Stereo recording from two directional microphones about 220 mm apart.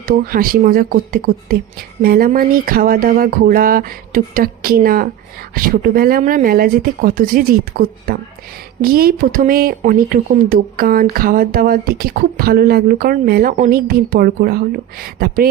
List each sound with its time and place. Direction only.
0.0 s speech: 40° right (ahead or behind)